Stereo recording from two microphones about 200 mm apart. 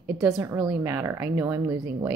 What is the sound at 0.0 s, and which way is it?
A woman's voice, 5° right (ahead or behind).